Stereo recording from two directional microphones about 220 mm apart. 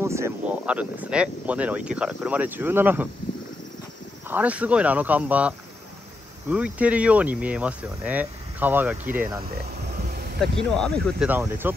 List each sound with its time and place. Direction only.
0.0 s speech: 10° right (ahead or behind)
4.3 s speech: 5° right (ahead or behind)
6.5 s speech: 5° right (ahead or behind)
9.5 s a sound: 45° right (ahead or behind)
10.8 s speech: 5° left (ahead or behind)
11.2 s speech: 10° right (ahead or behind)